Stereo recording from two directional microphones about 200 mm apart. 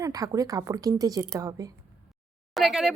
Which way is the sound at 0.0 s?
20° right (ahead or behind).